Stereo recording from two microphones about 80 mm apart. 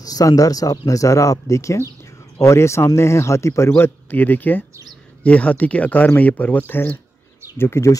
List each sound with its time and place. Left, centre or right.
0.0 s speech: left